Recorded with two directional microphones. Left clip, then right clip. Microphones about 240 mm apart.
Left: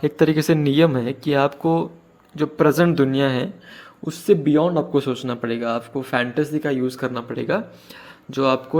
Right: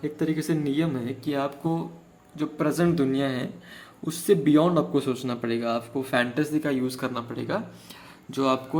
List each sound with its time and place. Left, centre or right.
0.0 s a man's voice: left
4.0 s a man's voice: centre